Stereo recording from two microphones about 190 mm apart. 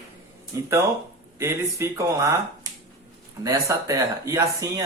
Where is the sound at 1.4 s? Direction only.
15° right (ahead or behind).